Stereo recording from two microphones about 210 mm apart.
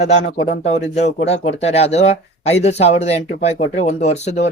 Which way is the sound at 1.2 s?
30° left (ahead or behind).